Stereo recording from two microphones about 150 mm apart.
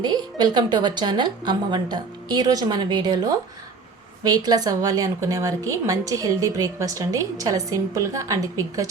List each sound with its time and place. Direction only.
0.0 s a woman's voice: 30° right (ahead or behind)